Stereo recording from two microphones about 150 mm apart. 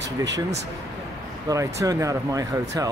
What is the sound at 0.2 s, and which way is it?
Speech, 25° right (ahead or behind).